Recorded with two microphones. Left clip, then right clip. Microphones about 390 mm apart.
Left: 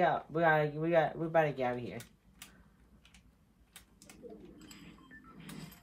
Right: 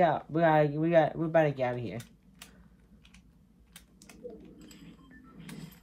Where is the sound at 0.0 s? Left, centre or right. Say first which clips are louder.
Right 4 dB; right.